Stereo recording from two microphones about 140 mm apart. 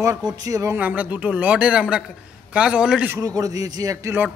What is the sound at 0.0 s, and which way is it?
Speech, 25° right (ahead or behind).